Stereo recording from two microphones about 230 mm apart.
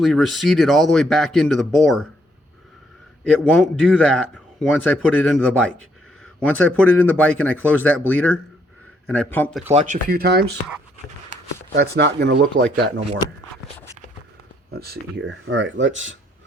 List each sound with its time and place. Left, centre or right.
0.0 s speech: centre
3.2 s speech: centre
6.9 s speech: centre
9.7 s speech: right
11.7 s speech: right
12.8 s speech: right
14.7 s speech: right